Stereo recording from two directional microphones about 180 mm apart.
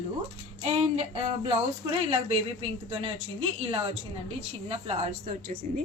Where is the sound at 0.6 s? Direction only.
35° right (ahead or behind).